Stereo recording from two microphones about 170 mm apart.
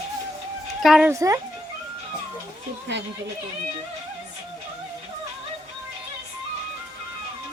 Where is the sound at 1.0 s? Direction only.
15° right (ahead or behind).